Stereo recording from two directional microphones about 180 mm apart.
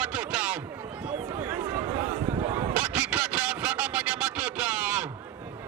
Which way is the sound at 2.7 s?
5° right (ahead or behind).